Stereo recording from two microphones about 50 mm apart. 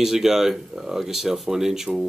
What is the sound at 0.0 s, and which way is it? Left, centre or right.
Speech, centre.